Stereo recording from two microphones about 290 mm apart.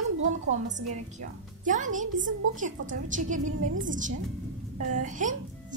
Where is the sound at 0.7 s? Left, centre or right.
Right.